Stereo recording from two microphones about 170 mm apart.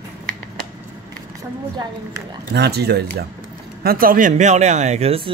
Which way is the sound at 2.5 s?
75° right (ahead or behind).